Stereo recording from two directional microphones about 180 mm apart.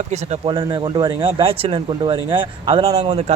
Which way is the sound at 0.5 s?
25° right (ahead or behind).